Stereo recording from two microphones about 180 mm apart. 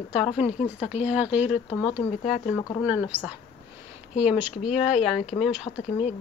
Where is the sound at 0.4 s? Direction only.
40° left (ahead or behind).